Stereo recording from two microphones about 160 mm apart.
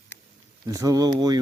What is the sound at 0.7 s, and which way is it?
Speech, 20° right (ahead or behind).